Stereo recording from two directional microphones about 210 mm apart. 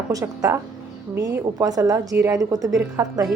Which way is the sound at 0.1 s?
15° right (ahead or behind).